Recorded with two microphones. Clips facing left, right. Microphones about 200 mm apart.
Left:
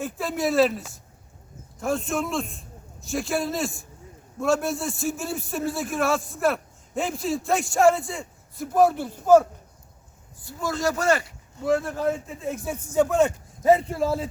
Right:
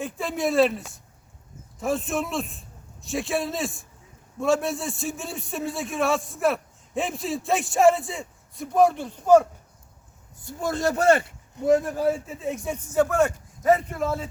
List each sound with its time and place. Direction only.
0.0 s a man's voice: centre (ahead or behind)
10.4 s a man's voice: 55° right (ahead or behind)
11.5 s speech: 20° right (ahead or behind); by 14.3 s 35° left (ahead or behind)